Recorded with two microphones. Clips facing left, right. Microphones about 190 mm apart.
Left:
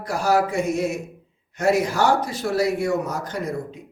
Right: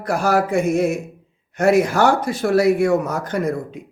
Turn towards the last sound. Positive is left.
turn(degrees=-55)  # may be behind; listen again after turning